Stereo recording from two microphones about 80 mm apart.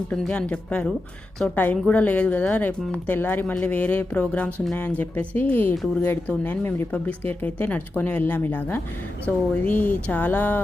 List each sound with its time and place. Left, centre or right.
0.1 s speech: centre